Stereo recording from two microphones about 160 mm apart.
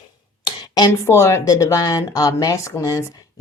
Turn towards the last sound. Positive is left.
turn(degrees=20)  # may be behind; listen again after turning